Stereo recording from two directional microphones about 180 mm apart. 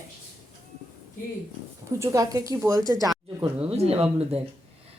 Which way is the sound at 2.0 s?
20° right (ahead or behind).